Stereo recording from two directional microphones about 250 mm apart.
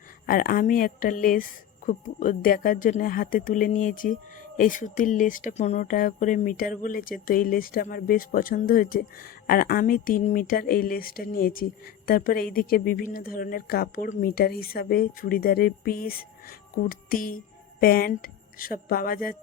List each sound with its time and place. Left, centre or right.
0.3 s speech: left